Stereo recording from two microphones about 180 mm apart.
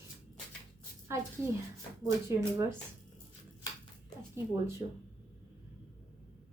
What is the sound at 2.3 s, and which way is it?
Speech, 15° right (ahead or behind).